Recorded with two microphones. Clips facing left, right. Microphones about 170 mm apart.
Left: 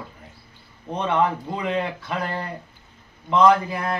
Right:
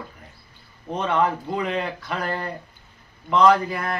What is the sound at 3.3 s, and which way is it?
Speech, 20° left (ahead or behind).